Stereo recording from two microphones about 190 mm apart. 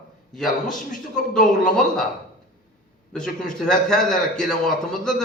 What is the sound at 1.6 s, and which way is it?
Speech, 5° left (ahead or behind).